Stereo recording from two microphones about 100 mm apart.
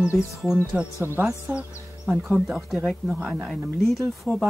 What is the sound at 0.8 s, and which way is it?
Speech, 20° right (ahead or behind).